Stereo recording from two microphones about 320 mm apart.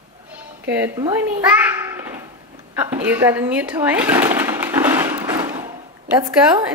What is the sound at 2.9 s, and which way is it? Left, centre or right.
Blender, centre.